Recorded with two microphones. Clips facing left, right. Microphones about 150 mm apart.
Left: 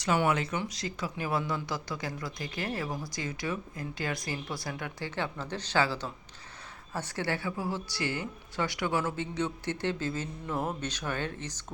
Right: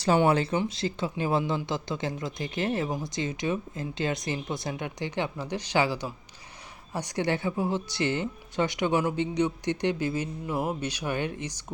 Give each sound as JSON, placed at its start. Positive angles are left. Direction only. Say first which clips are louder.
{"t": 0.0, "sound": "speech", "louder": "right 5 dB", "side_deg": -30}